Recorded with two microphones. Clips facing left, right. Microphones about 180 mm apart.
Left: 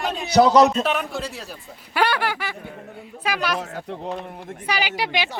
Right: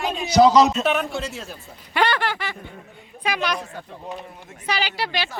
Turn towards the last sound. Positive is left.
turn(degrees=15)  # may be behind; listen again after turning